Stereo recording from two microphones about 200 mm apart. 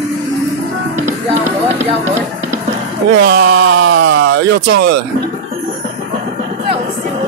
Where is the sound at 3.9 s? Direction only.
65° right (ahead or behind).